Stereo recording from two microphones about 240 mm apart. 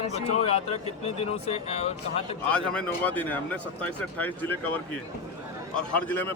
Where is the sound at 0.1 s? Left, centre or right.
Left.